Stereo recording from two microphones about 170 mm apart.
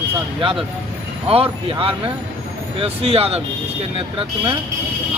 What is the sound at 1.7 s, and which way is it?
Speech, 30° right (ahead or behind).